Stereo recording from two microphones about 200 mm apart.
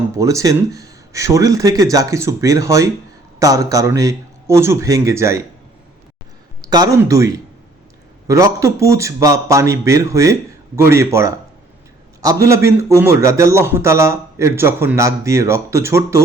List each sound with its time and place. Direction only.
0.2 s a man's voice: 15° right (ahead or behind)
6.6 s a man's voice: 20° right (ahead or behind)